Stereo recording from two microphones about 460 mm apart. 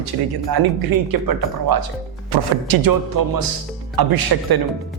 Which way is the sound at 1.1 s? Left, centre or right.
Right.